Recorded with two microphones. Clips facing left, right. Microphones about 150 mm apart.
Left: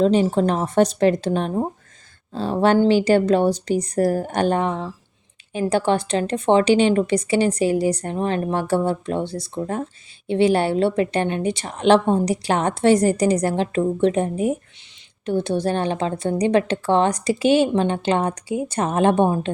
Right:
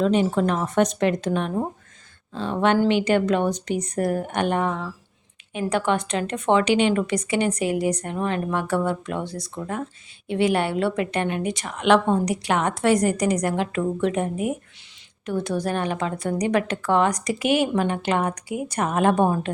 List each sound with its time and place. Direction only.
0.0 s a woman's voice: 30° left (ahead or behind)